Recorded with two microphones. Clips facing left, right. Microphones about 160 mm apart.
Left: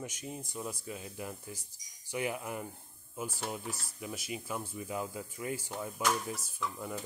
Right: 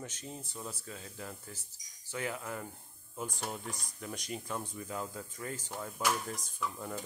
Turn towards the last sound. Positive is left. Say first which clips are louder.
# even
turn(degrees=0)  # may be behind; listen again after turning